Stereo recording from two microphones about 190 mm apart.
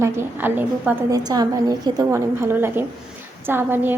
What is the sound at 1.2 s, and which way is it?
A woman's voice, 20° right (ahead or behind).